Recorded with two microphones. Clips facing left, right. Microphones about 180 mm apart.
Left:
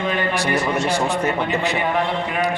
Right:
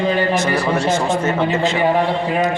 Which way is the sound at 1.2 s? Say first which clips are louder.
Right 4 dB; 15° left (ahead or behind).